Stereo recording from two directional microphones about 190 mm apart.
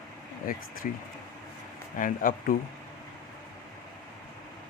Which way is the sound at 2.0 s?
45° left (ahead or behind).